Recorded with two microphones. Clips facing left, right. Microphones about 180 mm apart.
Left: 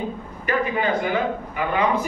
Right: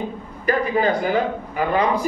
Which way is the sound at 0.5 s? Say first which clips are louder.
Right 3 dB; 35° right (ahead or behind).